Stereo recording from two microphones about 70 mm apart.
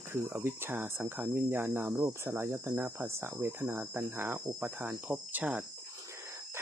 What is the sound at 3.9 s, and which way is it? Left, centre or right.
Cricket, right.